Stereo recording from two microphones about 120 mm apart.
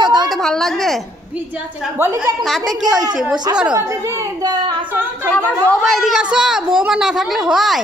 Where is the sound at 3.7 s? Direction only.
25° right (ahead or behind).